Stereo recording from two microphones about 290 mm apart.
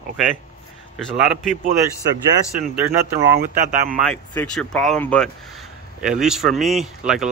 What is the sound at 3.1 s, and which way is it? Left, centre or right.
Speech, right.